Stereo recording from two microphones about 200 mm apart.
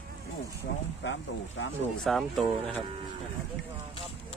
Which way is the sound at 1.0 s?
65° left (ahead or behind).